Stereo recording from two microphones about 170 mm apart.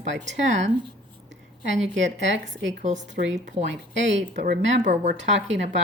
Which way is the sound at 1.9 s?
90° right.